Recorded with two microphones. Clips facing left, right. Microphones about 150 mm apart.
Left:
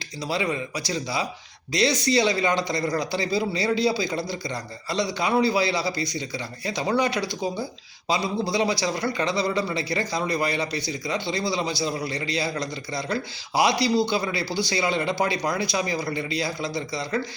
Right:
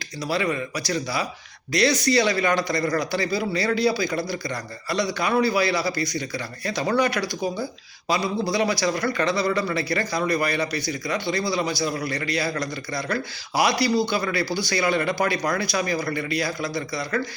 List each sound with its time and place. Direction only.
0.3 s a man's voice: 20° left (ahead or behind)